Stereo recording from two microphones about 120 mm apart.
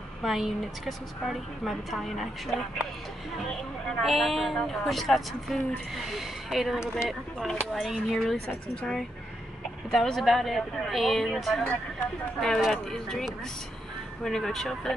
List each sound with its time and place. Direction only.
0.2 s a woman's voice: centre (ahead or behind)
3.9 s a woman's voice: centre (ahead or behind)